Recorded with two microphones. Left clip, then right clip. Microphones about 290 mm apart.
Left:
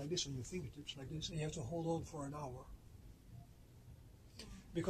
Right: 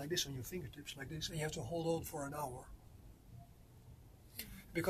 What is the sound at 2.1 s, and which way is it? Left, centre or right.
Speech, right.